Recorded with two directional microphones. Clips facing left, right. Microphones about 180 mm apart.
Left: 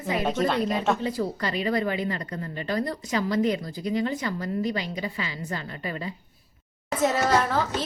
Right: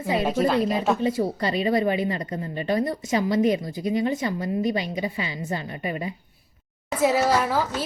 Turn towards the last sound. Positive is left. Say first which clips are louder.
# even
turn(degrees=-10)  # may be behind; listen again after turning